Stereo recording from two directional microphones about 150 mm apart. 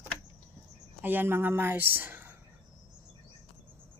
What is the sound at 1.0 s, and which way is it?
Speech, 15° right (ahead or behind).